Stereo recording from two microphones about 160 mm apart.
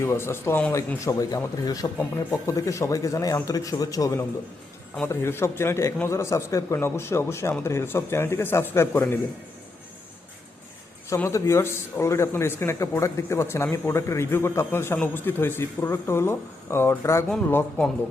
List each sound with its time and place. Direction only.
0.0 s a man's voice: 15° left (ahead or behind)
11.1 s a man's voice: 20° left (ahead or behind)
17.2 s speech: 5° left (ahead or behind)